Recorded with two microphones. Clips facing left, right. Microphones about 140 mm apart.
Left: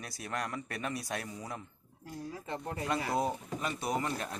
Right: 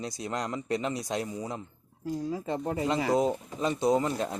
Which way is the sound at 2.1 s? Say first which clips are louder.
Right 10 dB; 90° right.